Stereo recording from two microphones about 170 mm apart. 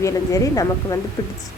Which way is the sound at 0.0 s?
20° left (ahead or behind).